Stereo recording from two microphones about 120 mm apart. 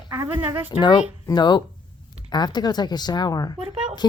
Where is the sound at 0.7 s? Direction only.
40° left (ahead or behind).